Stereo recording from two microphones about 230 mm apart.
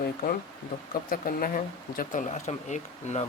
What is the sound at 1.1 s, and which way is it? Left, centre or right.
Speech, left.